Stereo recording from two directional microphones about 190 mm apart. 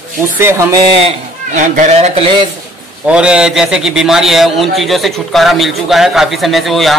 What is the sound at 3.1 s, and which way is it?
A man's voice, 5° right (ahead or behind).